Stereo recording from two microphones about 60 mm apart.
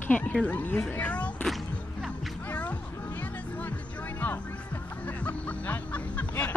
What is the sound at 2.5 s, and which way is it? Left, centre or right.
Music, left.